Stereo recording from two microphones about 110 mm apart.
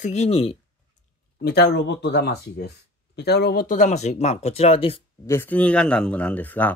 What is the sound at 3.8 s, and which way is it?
Speech, 90° left.